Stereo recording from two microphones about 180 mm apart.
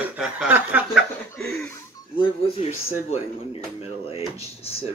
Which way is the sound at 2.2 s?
35° left (ahead or behind).